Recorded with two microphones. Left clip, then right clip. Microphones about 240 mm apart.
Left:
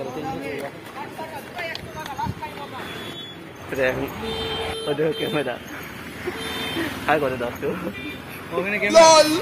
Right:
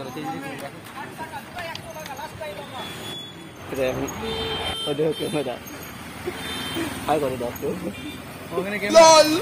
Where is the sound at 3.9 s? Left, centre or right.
Centre.